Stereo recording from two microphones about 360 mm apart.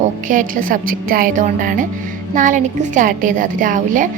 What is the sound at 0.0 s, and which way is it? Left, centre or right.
Speech, right.